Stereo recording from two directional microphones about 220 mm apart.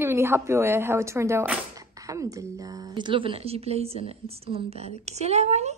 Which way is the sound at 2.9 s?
20° right (ahead or behind).